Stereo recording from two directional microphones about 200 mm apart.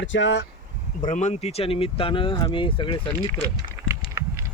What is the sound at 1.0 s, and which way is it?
Speech, 40° left (ahead or behind).